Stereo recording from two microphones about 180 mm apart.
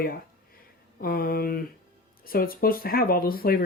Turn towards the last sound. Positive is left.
turn(degrees=55)  # may be behind; listen again after turning